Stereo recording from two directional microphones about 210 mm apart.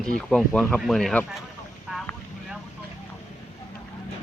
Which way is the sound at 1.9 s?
Centre (ahead or behind).